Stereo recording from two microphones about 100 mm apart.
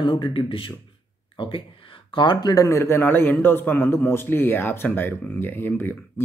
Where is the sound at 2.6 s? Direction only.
25° left (ahead or behind).